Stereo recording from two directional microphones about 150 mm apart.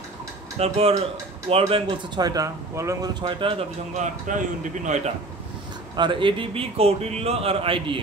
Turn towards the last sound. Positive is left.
turn(degrees=-40)  # may be behind; listen again after turning